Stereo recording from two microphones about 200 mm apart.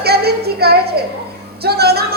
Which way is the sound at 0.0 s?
50° right (ahead or behind).